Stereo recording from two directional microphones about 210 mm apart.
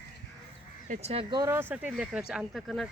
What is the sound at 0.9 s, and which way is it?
Speech, 30° right (ahead or behind).